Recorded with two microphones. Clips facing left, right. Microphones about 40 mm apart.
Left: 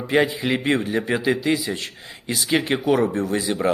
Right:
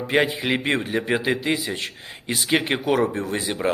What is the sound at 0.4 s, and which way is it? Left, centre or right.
A man's voice, right.